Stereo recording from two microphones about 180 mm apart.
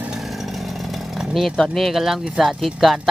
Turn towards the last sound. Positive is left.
turn(degrees=0)  # may be behind; listen again after turning